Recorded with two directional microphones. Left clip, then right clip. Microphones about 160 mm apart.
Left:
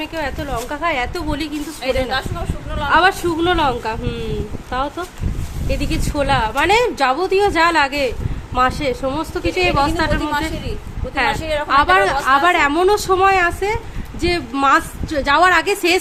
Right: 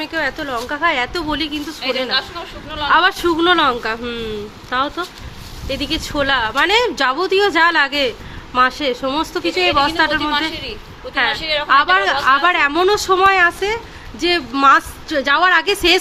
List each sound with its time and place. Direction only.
0.0 s a woman's voice: 5° left (ahead or behind)
2.0 s a woman's voice: 65° left (ahead or behind)
2.9 s a woman's voice: 10° left (ahead or behind)